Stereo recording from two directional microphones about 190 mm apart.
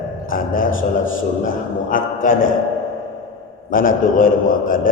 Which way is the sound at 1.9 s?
45° left (ahead or behind).